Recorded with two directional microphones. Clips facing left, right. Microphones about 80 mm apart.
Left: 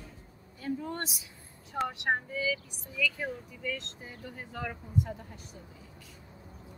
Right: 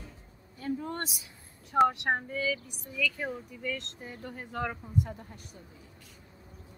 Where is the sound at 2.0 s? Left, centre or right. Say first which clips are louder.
Even; right.